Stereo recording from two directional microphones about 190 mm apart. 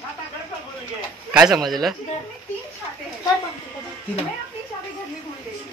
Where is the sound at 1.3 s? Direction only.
5° right (ahead or behind).